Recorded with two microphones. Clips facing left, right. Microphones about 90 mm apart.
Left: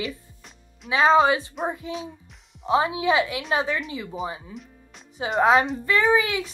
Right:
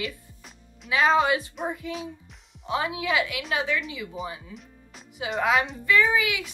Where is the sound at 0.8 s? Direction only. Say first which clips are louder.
Left 4 dB; 30° left (ahead or behind).